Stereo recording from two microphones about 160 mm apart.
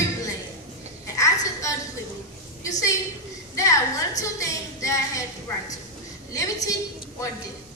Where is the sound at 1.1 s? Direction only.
20° left (ahead or behind).